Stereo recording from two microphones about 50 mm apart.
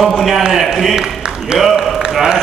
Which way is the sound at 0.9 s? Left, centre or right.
Centre.